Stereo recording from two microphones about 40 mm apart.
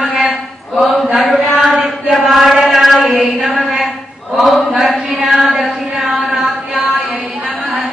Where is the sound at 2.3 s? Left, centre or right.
Centre.